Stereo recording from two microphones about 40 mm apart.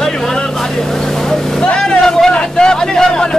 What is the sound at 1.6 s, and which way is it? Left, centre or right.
Speech, centre.